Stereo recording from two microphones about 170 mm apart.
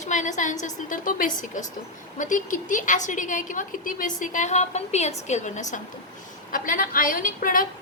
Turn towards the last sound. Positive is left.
turn(degrees=55)  # may be behind; listen again after turning